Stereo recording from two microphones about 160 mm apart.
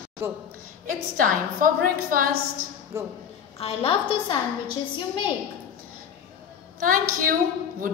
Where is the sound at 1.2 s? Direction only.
60° right (ahead or behind).